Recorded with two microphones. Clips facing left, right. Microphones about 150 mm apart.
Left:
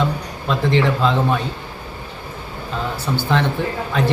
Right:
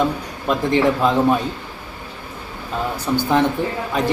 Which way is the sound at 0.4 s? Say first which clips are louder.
Right 1 dB; 15° right (ahead or behind).